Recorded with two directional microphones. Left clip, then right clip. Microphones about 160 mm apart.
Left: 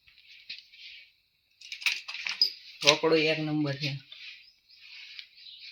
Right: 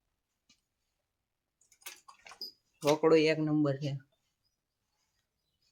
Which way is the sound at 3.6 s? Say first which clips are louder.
Even; 5° right (ahead or behind).